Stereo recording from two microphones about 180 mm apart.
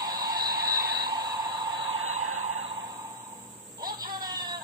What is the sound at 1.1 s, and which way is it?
Train, 25° right (ahead or behind).